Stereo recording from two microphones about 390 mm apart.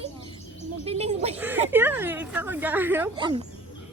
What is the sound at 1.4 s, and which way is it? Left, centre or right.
Speech, centre.